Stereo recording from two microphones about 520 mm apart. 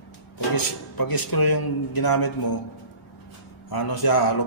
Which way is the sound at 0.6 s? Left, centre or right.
Left.